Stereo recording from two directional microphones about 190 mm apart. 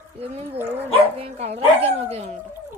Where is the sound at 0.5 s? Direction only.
10° right (ahead or behind).